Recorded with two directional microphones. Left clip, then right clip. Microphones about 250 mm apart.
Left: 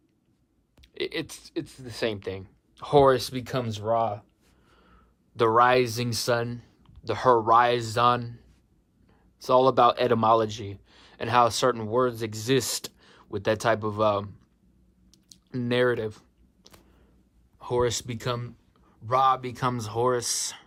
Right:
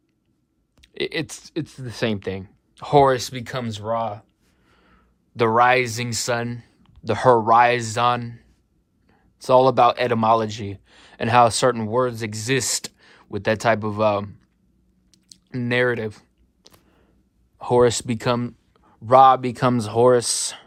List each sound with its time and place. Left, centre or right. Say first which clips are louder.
0.8 s speech: right 5 dB; centre
15.1 s a sound: right 3 dB; centre
17.6 s speech: right 9 dB; centre